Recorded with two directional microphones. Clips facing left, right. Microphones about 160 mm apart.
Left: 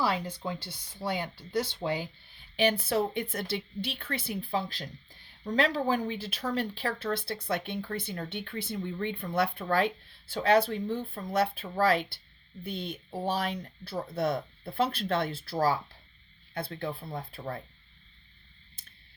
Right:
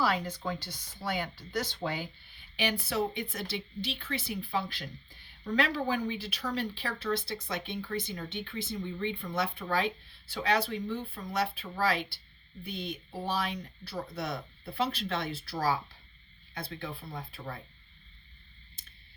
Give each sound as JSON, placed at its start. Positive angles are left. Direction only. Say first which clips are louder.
{"t": 0.0, "sound": "speech", "louder": "even", "side_deg": 30}
{"t": 2.6, "sound": "speech", "louder": "left 4 dB", "side_deg": 50}